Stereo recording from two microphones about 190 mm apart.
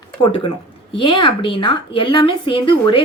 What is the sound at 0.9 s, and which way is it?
A woman's voice, 25° left (ahead or behind).